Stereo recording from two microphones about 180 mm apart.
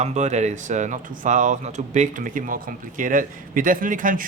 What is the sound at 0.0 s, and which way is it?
Speech, 40° right (ahead or behind).